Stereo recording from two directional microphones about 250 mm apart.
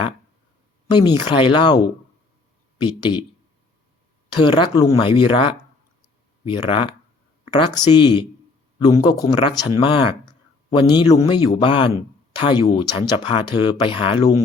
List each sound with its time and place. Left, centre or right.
0.9 s speech: centre
4.4 s speech: centre
7.9 s speech: centre